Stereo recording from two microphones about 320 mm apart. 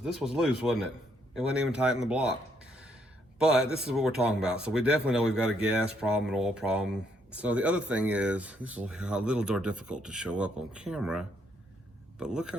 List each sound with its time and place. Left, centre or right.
0.0 s speech: centre
3.3 s speech: centre